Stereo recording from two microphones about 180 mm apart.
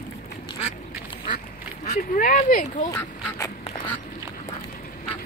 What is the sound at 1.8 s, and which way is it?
Speech, 45° left (ahead or behind).